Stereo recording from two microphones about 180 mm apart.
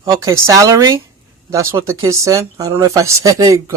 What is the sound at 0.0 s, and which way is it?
Speech, 20° right (ahead or behind).